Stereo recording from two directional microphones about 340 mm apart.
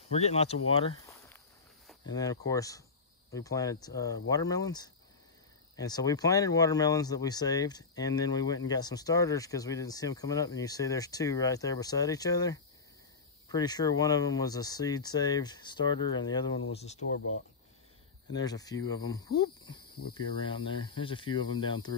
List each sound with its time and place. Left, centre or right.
0.1 s speech: centre
0.7 s a sound: centre
2.0 s speech: centre
18.3 s speech: centre